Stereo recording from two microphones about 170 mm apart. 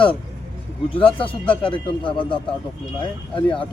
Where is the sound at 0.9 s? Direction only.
30° left (ahead or behind).